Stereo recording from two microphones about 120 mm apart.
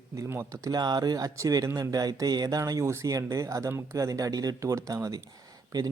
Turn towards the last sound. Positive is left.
turn(degrees=-30)  # may be behind; listen again after turning